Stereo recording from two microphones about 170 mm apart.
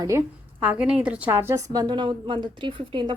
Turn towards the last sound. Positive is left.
turn(degrees=-30)  # may be behind; listen again after turning